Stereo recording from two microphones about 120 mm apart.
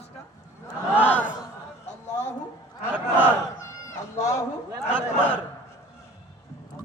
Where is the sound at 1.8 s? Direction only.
75° left (ahead or behind).